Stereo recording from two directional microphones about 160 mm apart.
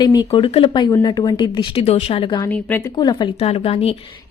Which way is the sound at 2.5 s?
10° left (ahead or behind).